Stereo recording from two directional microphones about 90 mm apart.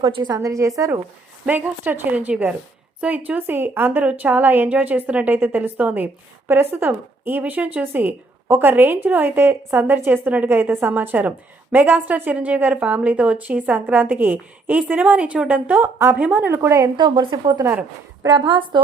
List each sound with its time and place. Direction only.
0.3 s a woman's voice: 35° right (ahead or behind)
1.5 s a woman's voice: 20° right (ahead or behind)
16.2 s a woman's voice: 10° right (ahead or behind)
16.5 s a woman's voice: 35° right (ahead or behind)
17.0 s a woman's voice: 55° right (ahead or behind)